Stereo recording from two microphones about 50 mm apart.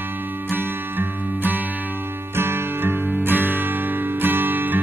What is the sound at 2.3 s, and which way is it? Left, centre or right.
Music, right.